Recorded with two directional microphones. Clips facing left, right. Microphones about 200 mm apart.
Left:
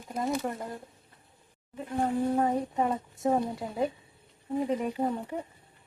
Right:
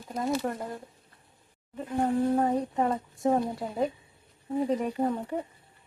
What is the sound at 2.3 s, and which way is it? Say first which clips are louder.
A woman's voice: right 1 dB; centre (ahead or behind).